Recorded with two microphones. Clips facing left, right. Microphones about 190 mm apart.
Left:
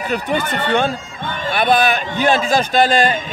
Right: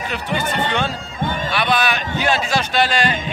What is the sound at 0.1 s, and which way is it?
Speech, 50° left (ahead or behind).